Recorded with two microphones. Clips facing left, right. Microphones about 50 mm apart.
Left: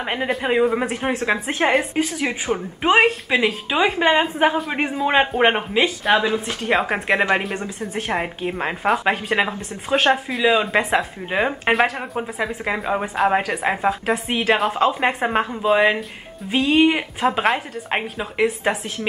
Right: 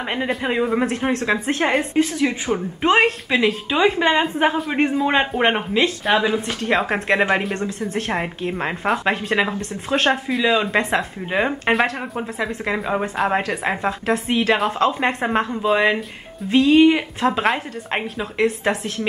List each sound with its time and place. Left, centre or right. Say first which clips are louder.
0.1 s a woman's voice: left 2 dB; centre
2.1 s a woman's voice: right 2 dB; centre
4.4 s a woman's voice: right 1 dB; centre
16.6 s a woman's voice: right 2 dB; centre
17.4 s a woman's voice: even; centre